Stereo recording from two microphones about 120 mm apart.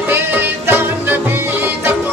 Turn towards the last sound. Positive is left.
turn(degrees=-20)  # may be behind; listen again after turning